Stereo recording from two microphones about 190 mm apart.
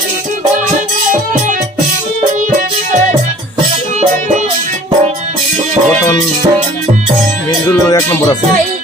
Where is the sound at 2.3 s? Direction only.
40° right (ahead or behind).